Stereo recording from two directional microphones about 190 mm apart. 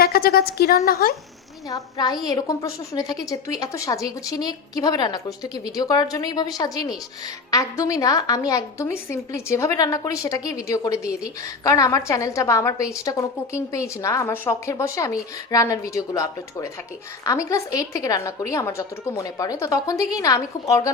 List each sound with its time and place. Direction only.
0.0 s speech: 55° left (ahead or behind)
1.7 s a woman's voice: 20° left (ahead or behind)